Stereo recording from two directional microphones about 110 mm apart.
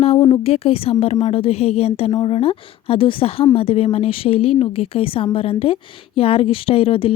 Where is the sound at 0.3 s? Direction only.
60° left (ahead or behind).